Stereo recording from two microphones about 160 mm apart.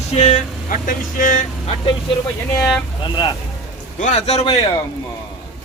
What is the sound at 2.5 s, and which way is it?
Speech, 5° left (ahead or behind).